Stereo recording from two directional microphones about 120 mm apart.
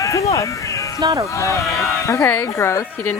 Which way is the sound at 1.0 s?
35° right (ahead or behind).